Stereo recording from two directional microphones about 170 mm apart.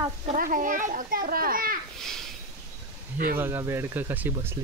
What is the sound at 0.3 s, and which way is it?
Speech, 55° right (ahead or behind).